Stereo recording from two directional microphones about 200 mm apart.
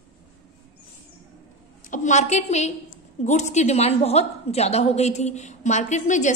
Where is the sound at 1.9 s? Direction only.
35° left (ahead or behind).